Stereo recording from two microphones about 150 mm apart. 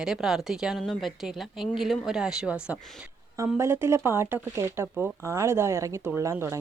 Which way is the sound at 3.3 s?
20° right (ahead or behind).